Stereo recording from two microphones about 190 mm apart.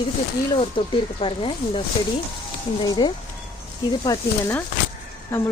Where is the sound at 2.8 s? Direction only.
25° left (ahead or behind).